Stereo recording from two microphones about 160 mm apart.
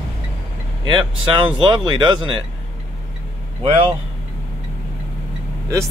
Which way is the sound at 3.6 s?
35° right (ahead or behind).